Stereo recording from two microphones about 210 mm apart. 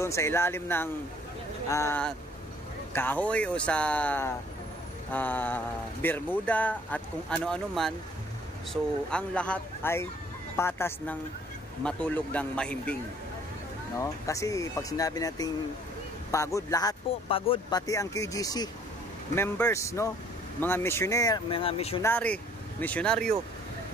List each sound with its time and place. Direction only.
0.0 s speech: 15° left (ahead or behind)
9.1 s a man's voice: 5° left (ahead or behind)
13.9 s speech: 15° left (ahead or behind)
22.0 s speech: 5° left (ahead or behind)